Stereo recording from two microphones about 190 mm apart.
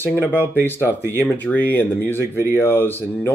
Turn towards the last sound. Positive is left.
turn(degrees=10)  # may be behind; listen again after turning